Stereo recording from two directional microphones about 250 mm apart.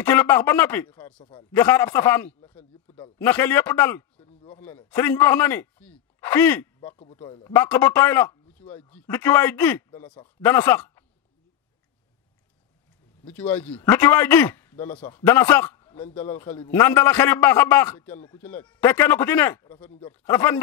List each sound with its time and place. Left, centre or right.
0.0 s a man's voice: centre
4.3 s a sound: left
4.6 s a man's voice: centre
13.2 s a man's voice: centre